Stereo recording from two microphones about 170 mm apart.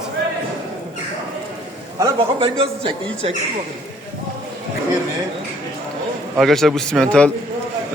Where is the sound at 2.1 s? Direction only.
30° right (ahead or behind).